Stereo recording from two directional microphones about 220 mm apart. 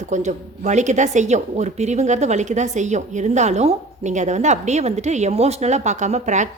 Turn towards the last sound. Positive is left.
turn(degrees=-30)  # may be behind; listen again after turning